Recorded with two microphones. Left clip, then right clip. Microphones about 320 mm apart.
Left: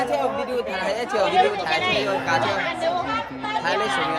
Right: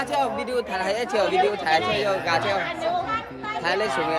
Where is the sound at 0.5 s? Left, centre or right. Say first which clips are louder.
Even; right.